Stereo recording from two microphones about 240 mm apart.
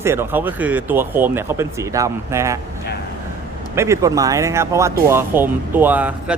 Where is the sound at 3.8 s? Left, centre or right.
Centre.